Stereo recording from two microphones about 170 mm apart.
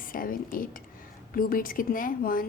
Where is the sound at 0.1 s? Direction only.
55° left (ahead or behind).